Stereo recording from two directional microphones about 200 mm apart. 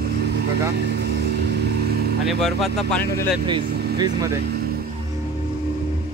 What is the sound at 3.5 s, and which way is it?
Speech, 20° right (ahead or behind).